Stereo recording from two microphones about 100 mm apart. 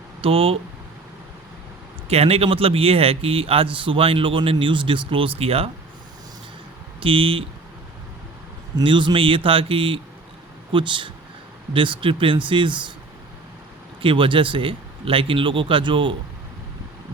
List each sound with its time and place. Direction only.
0.2 s a man's voice: 70° right (ahead or behind)
2.0 s a man's voice: 90° right
7.0 s speech: 60° right (ahead or behind)
8.7 s speech: 55° right (ahead or behind)
14.0 s speech: 60° right (ahead or behind)